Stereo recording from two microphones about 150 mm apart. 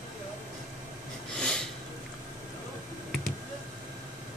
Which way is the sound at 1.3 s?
5° left (ahead or behind).